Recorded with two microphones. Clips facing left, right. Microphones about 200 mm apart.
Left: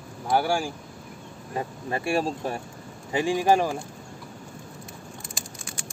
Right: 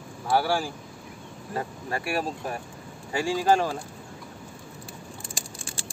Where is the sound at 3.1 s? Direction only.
20° left (ahead or behind).